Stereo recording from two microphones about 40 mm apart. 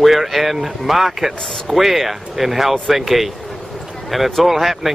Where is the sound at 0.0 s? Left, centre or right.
Centre.